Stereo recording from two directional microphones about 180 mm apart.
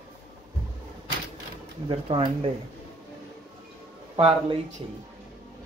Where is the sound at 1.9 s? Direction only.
35° right (ahead or behind).